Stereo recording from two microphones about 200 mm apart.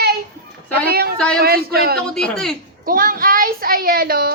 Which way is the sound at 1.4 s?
50° right (ahead or behind).